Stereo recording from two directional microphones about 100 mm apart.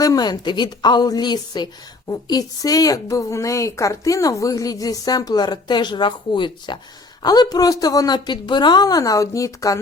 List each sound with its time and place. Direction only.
0.0 s a woman's voice: 40° left (ahead or behind)